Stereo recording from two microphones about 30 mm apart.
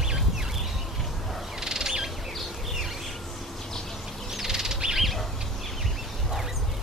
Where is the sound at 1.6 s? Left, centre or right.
Right.